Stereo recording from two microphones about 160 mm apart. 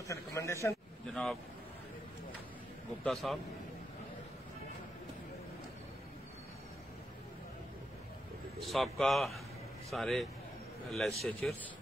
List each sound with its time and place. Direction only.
0.1 s a man's voice: 20° left (ahead or behind)
1.1 s speech: centre (ahead or behind)
3.0 s speech: centre (ahead or behind)
8.5 s speech: centre (ahead or behind)